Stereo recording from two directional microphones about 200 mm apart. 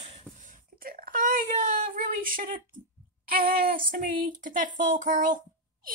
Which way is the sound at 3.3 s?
45° right (ahead or behind).